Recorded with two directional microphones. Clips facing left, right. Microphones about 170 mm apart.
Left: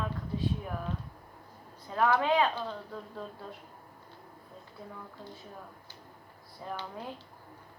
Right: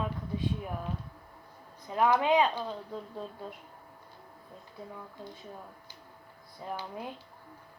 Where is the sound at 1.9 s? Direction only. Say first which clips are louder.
Right 1 dB; 15° right (ahead or behind).